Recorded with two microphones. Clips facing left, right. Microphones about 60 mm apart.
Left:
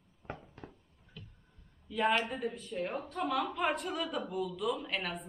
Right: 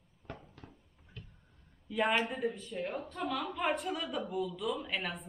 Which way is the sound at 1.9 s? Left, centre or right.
Centre.